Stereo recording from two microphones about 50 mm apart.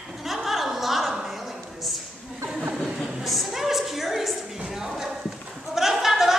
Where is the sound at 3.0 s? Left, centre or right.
Centre.